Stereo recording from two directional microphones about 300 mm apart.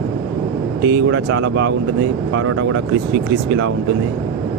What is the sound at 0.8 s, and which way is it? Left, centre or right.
Speech, right.